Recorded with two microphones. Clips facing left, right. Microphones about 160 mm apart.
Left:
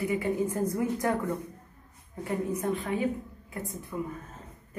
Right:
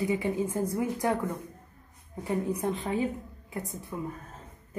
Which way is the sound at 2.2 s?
20° right (ahead or behind).